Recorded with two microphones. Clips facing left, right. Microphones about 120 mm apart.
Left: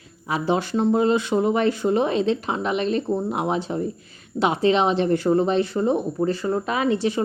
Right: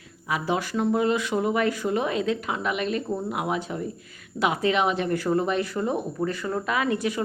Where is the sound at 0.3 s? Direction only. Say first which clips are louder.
Left 4 dB; 30° left (ahead or behind).